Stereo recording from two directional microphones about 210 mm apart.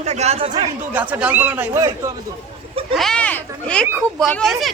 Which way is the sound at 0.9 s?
5° right (ahead or behind).